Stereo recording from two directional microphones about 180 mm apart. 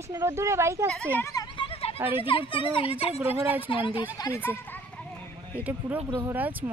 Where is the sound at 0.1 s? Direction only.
15° right (ahead or behind).